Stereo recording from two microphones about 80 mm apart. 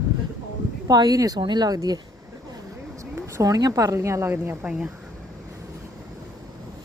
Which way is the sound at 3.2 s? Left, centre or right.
Right.